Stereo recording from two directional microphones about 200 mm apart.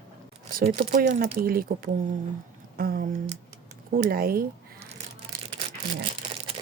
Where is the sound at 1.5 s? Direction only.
45° right (ahead or behind).